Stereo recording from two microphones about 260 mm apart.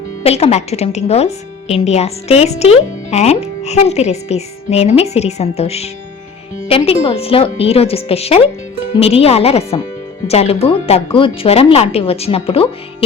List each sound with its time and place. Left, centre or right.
0.2 s a woman's voice: left